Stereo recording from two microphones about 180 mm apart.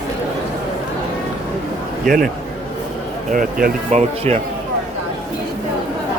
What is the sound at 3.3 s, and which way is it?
Speech, 50° right (ahead or behind).